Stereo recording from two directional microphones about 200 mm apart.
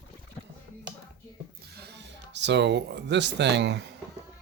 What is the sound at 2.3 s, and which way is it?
Speech, 60° right (ahead or behind).